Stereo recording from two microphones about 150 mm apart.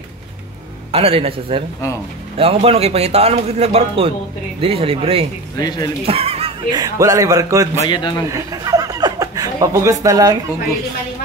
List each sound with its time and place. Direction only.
0.9 s speech: 40° right (ahead or behind)
5.6 s a man's voice: 25° left (ahead or behind)
6.0 s a sound: 40° right (ahead or behind)
6.7 s a man's voice: 25° right (ahead or behind)
7.8 s a man's voice: 30° left (ahead or behind)
8.3 s speech: 25° right (ahead or behind)